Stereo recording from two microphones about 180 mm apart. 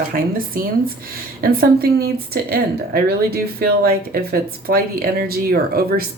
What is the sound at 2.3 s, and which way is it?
Speech, 60° right (ahead or behind).